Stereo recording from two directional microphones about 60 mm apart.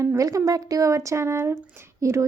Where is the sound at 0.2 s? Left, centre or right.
Right.